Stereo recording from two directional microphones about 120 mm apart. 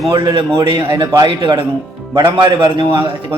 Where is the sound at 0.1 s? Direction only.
40° right (ahead or behind).